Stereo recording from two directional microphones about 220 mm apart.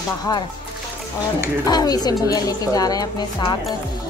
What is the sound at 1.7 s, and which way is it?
Speech, 20° left (ahead or behind).